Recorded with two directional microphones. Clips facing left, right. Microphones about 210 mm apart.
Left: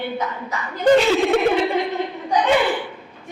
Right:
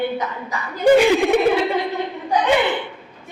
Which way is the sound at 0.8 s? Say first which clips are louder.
Right 2 dB; 10° right (ahead or behind).